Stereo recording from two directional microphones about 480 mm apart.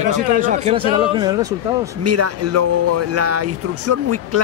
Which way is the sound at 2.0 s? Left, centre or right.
Right.